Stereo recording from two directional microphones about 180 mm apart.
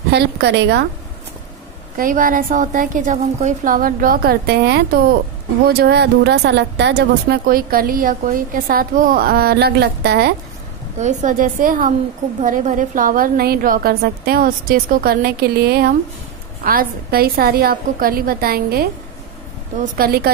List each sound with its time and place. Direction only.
0.1 s a woman's voice: 70° right (ahead or behind)
2.0 s a woman's voice: 50° right (ahead or behind)
11.0 s a woman's voice: 40° right (ahead or behind); by 18.9 s 55° right (ahead or behind)
20.0 s speech: 55° right (ahead or behind)